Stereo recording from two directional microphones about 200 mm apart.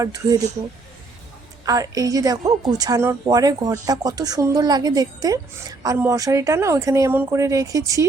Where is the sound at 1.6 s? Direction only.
15° right (ahead or behind).